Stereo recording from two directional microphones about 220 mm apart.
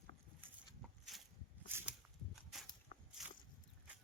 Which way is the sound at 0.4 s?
Centre (ahead or behind).